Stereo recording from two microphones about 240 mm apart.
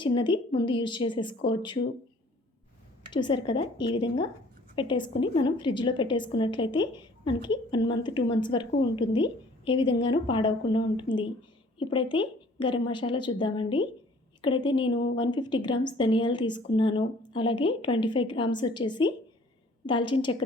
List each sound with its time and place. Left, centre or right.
0.0 s a woman's voice: centre
3.1 s a woman's voice: centre